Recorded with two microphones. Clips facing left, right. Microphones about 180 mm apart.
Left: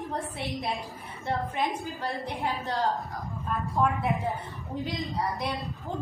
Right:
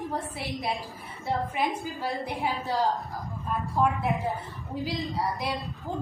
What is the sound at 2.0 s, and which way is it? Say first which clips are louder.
A woman's voice: right 2 dB; 10° right (ahead or behind).